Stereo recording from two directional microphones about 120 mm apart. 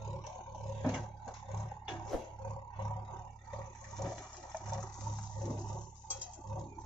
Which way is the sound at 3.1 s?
5° left (ahead or behind).